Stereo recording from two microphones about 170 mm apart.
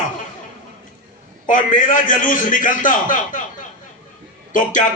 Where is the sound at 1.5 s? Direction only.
50° left (ahead or behind).